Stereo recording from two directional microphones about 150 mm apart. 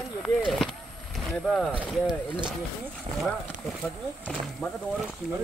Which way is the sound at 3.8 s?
10° left (ahead or behind).